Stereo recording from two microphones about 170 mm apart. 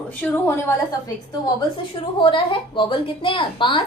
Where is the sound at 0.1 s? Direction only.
10° left (ahead or behind).